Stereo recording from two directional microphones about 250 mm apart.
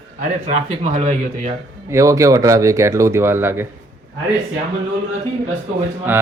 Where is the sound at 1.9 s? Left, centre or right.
Centre.